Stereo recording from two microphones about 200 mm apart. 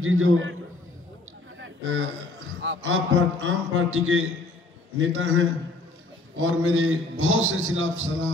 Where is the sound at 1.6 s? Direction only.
85° right.